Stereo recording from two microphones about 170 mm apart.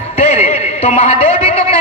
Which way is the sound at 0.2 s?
40° left (ahead or behind).